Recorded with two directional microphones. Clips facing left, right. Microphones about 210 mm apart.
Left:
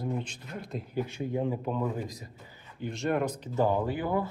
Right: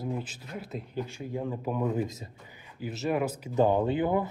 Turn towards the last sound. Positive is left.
turn(degrees=-20)  # may be behind; listen again after turning